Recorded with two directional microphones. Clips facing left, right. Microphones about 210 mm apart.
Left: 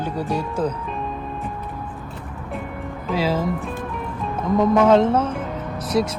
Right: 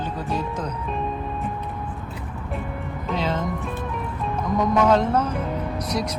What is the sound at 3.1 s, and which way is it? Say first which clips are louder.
Speech: left 4 dB; 5° left (ahead or behind).